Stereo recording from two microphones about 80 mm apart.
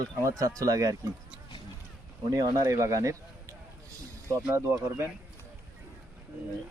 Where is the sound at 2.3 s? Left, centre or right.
Right.